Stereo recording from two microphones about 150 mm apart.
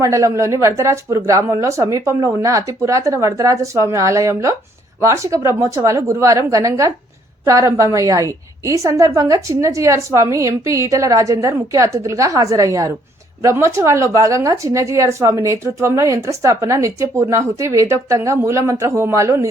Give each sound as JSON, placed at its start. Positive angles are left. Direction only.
{"t": 0.0, "sound": "speech", "side_deg": -20}